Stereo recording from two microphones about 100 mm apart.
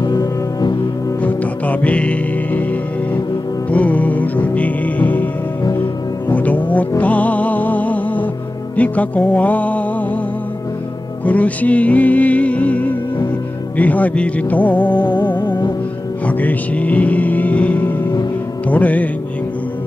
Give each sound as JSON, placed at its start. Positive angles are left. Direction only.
{"t": 0.0, "sound": "music", "side_deg": 40}
{"t": 1.2, "sound": "music", "side_deg": 15}
{"t": 3.7, "sound": "music", "side_deg": 15}
{"t": 6.3, "sound": "music", "side_deg": 15}
{"t": 11.2, "sound": "music", "side_deg": 15}
{"t": 15.0, "sound": "music", "side_deg": 50}
{"t": 16.3, "sound": "music", "side_deg": 15}